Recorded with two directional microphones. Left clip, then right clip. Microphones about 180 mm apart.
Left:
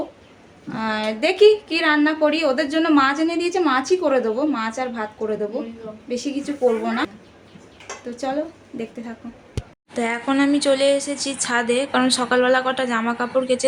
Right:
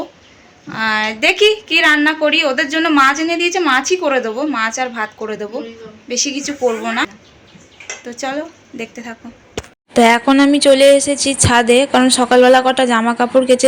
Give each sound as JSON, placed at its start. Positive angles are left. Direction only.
{"t": 0.7, "sound": "a woman's voice", "side_deg": 0}
{"t": 9.9, "sound": "a woman's voice", "side_deg": -50}
{"t": 10.2, "sound": "a woman's voice", "side_deg": -35}